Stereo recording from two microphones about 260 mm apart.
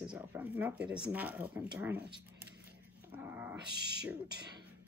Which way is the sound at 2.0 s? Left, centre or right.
Right.